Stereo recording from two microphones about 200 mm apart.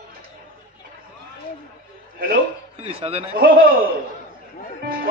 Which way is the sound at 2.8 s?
30° right (ahead or behind).